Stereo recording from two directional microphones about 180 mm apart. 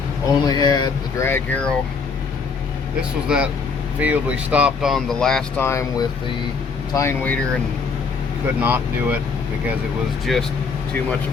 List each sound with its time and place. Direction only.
0.4 s speech: 20° left (ahead or behind)
1.3 s speech: 10° left (ahead or behind)
3.2 s speech: 5° right (ahead or behind)
5.6 s speech: 15° left (ahead or behind)
8.6 s speech: 10° right (ahead or behind)
10.3 s speech: centre (ahead or behind)